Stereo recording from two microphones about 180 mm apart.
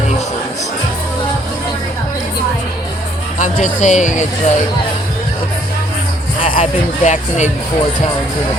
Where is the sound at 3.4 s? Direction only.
45° left (ahead or behind).